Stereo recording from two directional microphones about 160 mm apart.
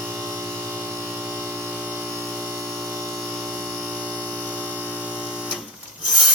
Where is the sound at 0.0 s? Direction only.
15° right (ahead or behind).